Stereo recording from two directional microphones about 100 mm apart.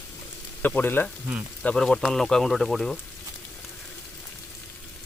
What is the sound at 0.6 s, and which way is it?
Speech, 20° left (ahead or behind).